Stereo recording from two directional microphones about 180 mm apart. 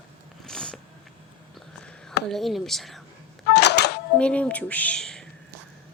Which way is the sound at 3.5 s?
70° left (ahead or behind).